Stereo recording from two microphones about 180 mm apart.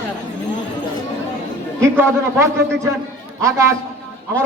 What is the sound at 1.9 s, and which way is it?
A man's voice, 15° right (ahead or behind).